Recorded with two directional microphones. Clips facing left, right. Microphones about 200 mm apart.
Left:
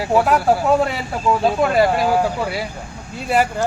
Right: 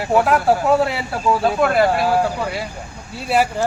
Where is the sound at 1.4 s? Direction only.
15° left (ahead or behind).